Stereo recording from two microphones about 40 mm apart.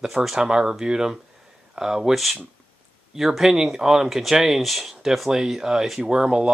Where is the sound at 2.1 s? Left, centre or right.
Centre.